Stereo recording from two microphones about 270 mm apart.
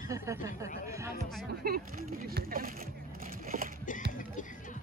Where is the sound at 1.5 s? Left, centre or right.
Right.